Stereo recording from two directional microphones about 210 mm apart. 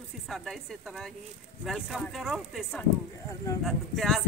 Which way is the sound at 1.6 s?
Centre (ahead or behind).